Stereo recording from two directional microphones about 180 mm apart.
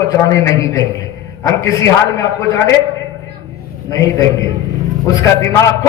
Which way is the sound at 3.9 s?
20° left (ahead or behind).